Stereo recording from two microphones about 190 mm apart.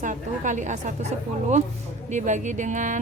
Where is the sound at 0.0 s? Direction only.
40° right (ahead or behind).